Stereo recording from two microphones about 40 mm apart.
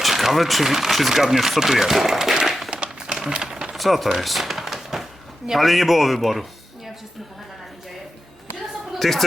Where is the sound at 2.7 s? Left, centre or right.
Right.